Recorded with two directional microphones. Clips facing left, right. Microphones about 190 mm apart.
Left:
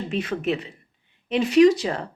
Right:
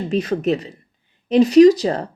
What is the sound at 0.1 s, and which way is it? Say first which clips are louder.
Speech: right 6 dB; 40° right (ahead or behind).